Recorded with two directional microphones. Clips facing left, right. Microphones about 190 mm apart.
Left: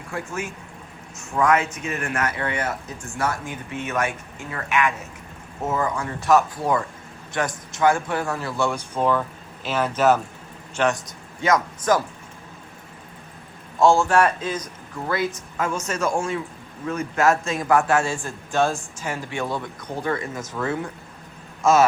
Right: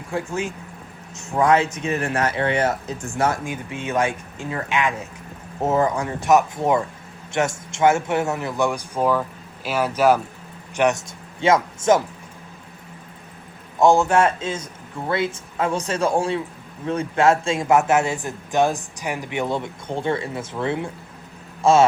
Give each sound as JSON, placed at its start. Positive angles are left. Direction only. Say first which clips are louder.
{"t": 0.1, "sound": "a man's voice", "louder": "right 4 dB", "side_deg": -20}
{"t": 3.4, "sound": "a man's voice", "louder": "right 2 dB", "side_deg": -15}
{"t": 10.8, "sound": "speech", "louder": "right 3 dB", "side_deg": -20}
{"t": 13.7, "sound": "a man's voice", "louder": "right 1 dB", "side_deg": -20}